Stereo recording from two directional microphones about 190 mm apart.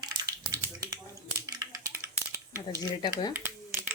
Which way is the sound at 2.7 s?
25° left (ahead or behind).